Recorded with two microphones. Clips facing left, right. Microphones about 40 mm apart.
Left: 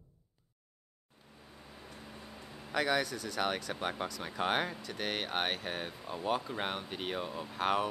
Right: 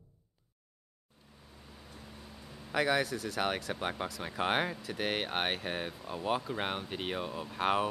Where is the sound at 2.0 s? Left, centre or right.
Centre.